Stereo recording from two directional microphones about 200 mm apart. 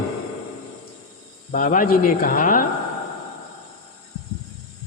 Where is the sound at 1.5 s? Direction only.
40° left (ahead or behind).